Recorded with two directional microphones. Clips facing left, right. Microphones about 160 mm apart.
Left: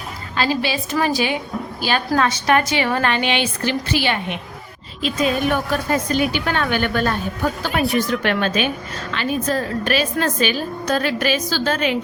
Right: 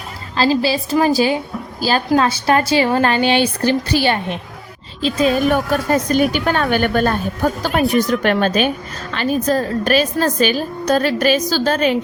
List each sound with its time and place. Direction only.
0.3 s a woman's voice: 30° right (ahead or behind)